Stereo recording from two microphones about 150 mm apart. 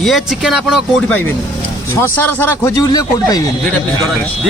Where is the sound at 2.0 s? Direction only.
10° left (ahead or behind).